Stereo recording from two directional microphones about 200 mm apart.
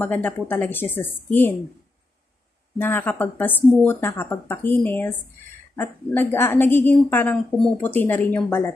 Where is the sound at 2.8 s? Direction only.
10° left (ahead or behind).